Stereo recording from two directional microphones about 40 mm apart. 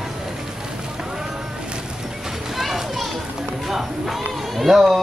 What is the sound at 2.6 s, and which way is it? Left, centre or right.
Children playing, centre.